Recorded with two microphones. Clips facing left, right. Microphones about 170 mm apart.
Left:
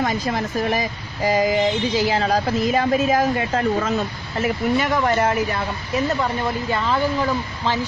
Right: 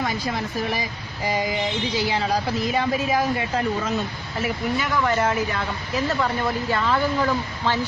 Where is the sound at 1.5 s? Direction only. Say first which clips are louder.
Left 6 dB; 50° left (ahead or behind).